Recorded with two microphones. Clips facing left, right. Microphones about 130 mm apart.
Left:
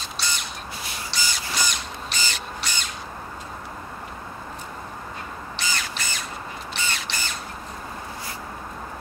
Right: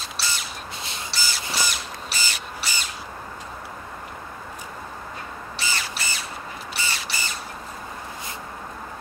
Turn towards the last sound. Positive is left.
turn(degrees=-5)  # may be behind; listen again after turning